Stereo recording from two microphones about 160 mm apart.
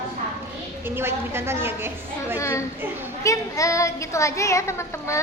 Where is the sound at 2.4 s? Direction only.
20° left (ahead or behind).